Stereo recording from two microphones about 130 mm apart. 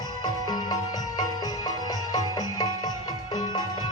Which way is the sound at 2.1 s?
30° left (ahead or behind).